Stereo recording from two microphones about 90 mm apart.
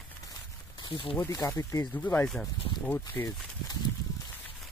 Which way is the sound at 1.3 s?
40° left (ahead or behind).